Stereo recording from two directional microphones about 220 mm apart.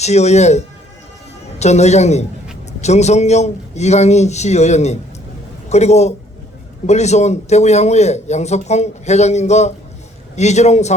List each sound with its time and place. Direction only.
0.0 s a man's voice: 30° left (ahead or behind)